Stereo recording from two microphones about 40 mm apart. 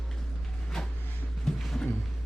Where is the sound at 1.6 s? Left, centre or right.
Centre.